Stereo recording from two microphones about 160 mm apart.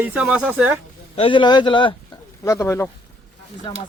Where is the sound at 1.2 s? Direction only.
30° left (ahead or behind).